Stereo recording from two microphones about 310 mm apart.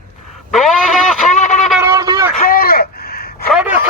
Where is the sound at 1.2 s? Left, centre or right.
Left.